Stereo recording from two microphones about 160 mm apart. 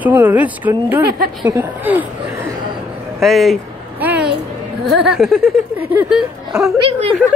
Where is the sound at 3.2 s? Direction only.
Centre (ahead or behind).